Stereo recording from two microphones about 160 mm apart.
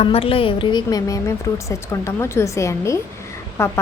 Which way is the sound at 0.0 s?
35° left (ahead or behind).